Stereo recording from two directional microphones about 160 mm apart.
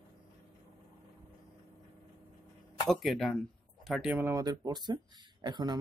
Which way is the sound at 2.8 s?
Centre (ahead or behind).